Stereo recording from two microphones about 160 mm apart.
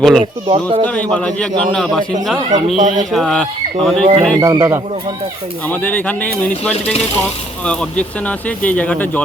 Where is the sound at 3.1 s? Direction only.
Centre (ahead or behind).